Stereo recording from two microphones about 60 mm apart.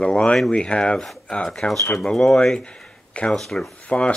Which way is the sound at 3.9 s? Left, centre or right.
Centre.